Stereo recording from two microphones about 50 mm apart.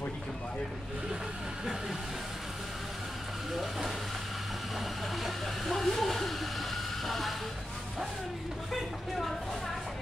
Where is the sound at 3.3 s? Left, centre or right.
Centre.